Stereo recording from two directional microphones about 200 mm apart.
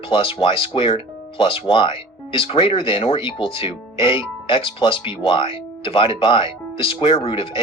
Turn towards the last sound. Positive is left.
turn(degrees=25)  # may be behind; listen again after turning